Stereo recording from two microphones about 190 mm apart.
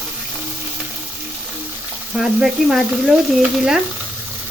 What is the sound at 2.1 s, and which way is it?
Speech, centre (ahead or behind).